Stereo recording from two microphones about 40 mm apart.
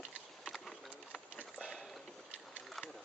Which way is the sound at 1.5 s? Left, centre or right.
Left.